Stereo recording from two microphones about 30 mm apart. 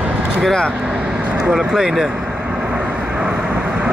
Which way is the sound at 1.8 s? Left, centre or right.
Centre.